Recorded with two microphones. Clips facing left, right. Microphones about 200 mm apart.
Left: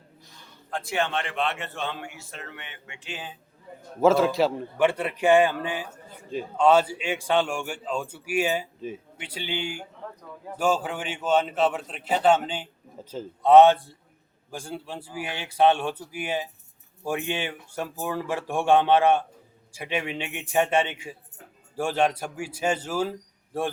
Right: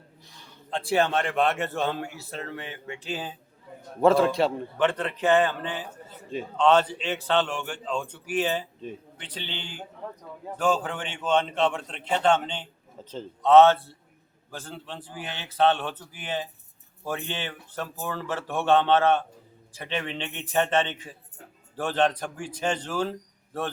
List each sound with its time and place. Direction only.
0.7 s a man's voice: 30° right (ahead or behind)
4.0 s a man's voice: centre (ahead or behind)